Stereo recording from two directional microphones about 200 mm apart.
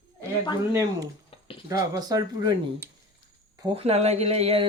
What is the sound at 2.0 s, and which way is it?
Speech, 20° right (ahead or behind).